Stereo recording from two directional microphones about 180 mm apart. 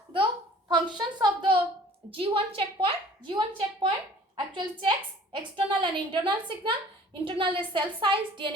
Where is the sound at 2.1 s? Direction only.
30° right (ahead or behind).